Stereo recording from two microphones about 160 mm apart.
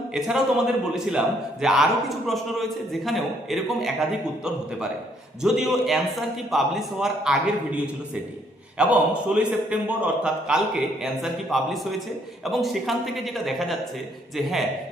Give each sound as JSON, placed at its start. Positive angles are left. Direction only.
{"t": 0.1, "sound": "a man's voice", "side_deg": -5}
{"t": 5.4, "sound": "a man's voice", "side_deg": -5}
{"t": 8.8, "sound": "a man's voice", "side_deg": -5}